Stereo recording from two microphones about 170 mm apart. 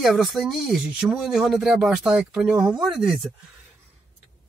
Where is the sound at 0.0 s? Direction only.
Centre (ahead or behind).